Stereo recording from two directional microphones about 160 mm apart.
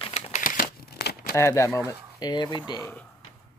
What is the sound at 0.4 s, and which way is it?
Crumpling, 60° left (ahead or behind).